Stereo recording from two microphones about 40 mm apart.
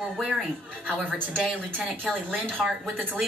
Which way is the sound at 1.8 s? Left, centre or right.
Centre.